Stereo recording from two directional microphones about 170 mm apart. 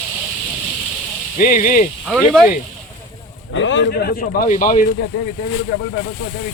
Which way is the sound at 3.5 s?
90° left.